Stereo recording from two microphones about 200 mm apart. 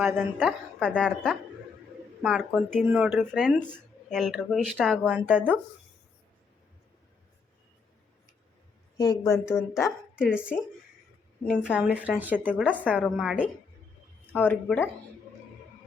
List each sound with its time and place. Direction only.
0.0 s speech: centre (ahead or behind)
9.0 s a woman's voice: 20° left (ahead or behind)
9.3 s speech: 5° right (ahead or behind)
11.4 s speech: 5° left (ahead or behind)
11.7 s speech: 5° right (ahead or behind)
14.3 s a woman's voice: 10° left (ahead or behind)